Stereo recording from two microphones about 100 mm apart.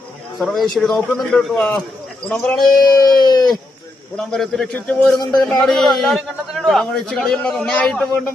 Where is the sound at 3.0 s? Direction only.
45° left (ahead or behind).